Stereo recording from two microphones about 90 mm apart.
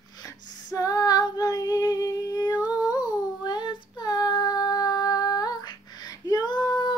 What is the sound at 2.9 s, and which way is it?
Child singing, 50° left (ahead or behind).